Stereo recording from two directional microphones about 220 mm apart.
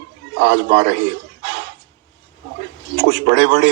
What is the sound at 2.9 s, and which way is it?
Speech, 50° right (ahead or behind).